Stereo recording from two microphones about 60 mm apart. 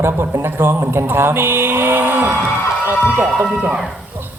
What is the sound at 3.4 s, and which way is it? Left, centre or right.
Speech, centre.